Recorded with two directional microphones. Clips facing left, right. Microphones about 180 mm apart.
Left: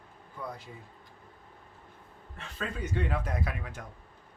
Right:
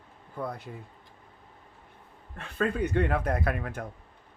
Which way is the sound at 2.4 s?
60° right (ahead or behind).